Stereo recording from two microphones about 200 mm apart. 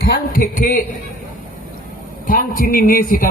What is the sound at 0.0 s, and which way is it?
Speech, 50° left (ahead or behind).